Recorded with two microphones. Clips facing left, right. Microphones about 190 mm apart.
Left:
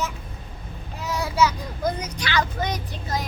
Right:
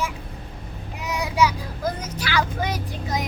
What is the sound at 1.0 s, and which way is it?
A child's voice, 15° right (ahead or behind).